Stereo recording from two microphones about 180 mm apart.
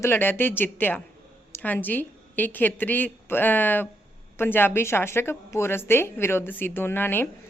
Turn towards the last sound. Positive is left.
turn(degrees=10)  # may be behind; listen again after turning